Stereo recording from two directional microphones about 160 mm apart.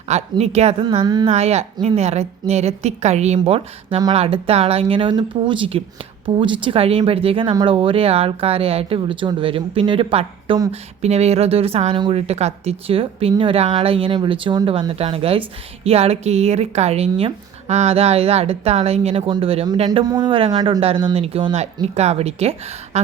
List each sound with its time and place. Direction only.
0.1 s speech: 45° right (ahead or behind)
1.0 s speech: 25° right (ahead or behind)
1.3 s a woman's voice: 40° right (ahead or behind)